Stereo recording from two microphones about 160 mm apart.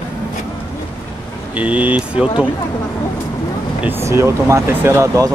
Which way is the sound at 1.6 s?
10° right (ahead or behind).